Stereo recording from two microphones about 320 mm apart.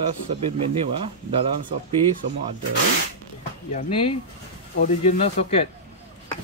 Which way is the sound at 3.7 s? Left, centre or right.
Centre.